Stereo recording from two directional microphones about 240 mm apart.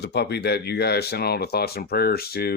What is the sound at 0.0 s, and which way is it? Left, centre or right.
Speech, left.